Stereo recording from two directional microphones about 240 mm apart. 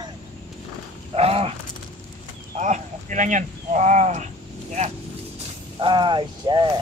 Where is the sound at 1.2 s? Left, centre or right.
Right.